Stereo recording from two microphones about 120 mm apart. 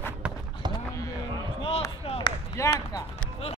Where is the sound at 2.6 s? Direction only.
25° left (ahead or behind).